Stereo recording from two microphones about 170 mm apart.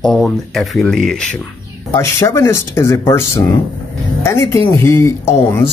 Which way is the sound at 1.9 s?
15° left (ahead or behind).